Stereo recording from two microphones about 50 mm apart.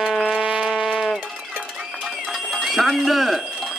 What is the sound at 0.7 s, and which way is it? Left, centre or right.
Music, centre.